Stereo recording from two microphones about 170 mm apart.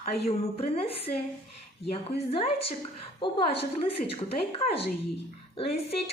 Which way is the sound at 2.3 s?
35° left (ahead or behind).